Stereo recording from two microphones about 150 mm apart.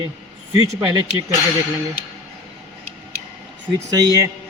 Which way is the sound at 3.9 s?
25° right (ahead or behind).